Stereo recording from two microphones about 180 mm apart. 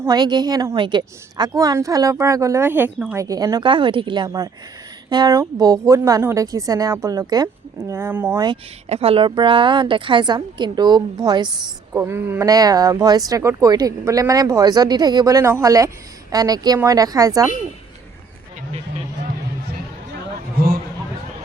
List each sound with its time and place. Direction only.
0.0 s a woman's voice: 20° right (ahead or behind)
8.4 s a woman's voice: 30° right (ahead or behind)